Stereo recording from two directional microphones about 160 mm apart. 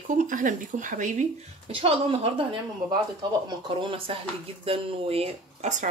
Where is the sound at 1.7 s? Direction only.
35° right (ahead or behind).